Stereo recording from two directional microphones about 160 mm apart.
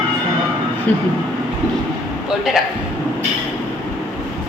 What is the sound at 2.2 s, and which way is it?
Speech, centre (ahead or behind).